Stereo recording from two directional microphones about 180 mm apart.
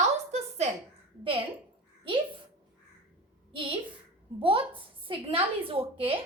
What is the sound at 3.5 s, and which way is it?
A woman's voice, 30° right (ahead or behind).